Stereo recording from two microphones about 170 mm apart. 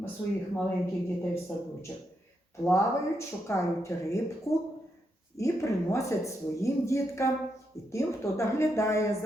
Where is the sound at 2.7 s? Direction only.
15° left (ahead or behind).